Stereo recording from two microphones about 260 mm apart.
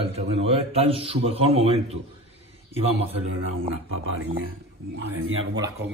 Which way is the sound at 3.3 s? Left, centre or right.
Right.